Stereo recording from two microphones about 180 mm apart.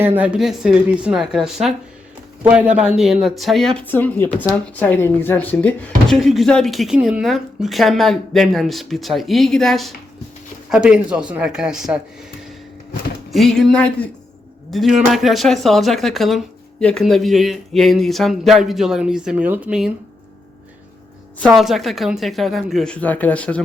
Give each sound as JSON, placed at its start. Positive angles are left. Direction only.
{"t": 0.0, "sound": "speech", "side_deg": -10}
{"t": 13.3, "sound": "speech", "side_deg": 0}
{"t": 21.4, "sound": "speech", "side_deg": 0}